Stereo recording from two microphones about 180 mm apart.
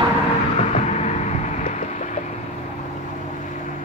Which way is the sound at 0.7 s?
40° left (ahead or behind).